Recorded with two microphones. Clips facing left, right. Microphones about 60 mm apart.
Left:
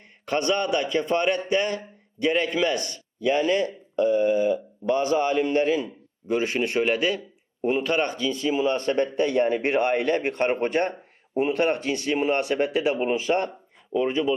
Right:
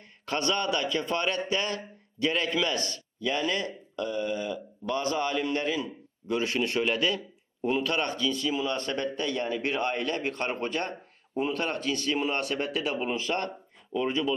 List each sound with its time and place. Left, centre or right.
0.3 s a man's voice: left